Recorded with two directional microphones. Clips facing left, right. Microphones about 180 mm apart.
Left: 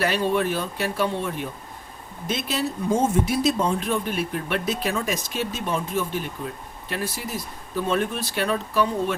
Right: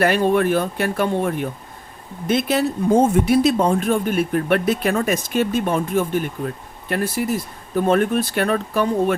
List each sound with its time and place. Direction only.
0.0 s speech: 55° right (ahead or behind)